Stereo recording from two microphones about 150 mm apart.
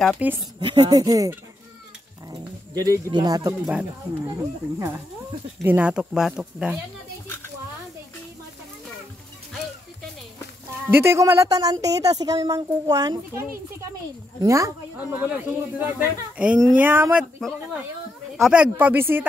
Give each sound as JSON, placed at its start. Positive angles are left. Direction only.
{"t": 0.4, "sound": "speech", "side_deg": -30}
{"t": 2.3, "sound": "speech", "side_deg": -25}
{"t": 10.9, "sound": "speech", "side_deg": -15}